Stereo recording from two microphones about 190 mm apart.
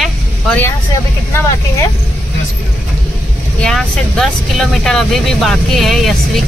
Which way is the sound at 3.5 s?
5° left (ahead or behind).